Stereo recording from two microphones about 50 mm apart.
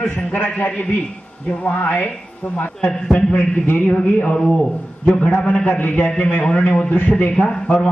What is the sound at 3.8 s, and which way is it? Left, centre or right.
Speech, left.